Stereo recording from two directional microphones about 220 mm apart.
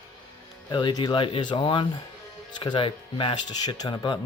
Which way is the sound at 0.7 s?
20° left (ahead or behind).